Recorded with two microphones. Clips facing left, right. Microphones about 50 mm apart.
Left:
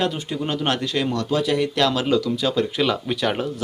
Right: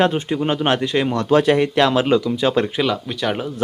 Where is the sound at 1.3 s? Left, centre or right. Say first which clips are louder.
Right 9 dB; right.